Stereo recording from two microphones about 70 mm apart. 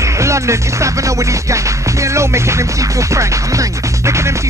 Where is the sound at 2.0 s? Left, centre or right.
Right.